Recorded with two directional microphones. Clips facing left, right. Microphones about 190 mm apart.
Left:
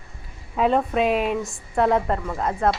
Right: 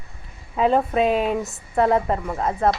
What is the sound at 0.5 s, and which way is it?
A woman's voice, centre (ahead or behind).